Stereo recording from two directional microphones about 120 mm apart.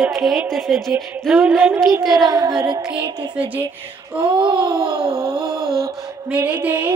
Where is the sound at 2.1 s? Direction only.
35° right (ahead or behind).